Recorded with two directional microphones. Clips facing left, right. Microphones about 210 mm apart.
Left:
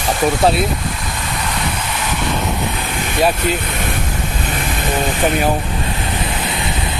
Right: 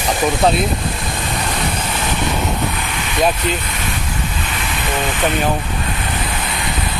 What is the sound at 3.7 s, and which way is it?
Vehicle, 55° left (ahead or behind).